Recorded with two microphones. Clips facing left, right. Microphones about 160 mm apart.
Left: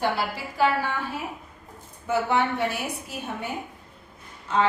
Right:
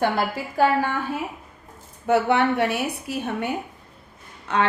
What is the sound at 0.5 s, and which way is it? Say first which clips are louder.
Speech: right 3 dB; 50° right (ahead or behind).